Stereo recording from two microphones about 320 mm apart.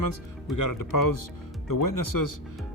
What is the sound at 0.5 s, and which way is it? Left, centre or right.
Speech, left.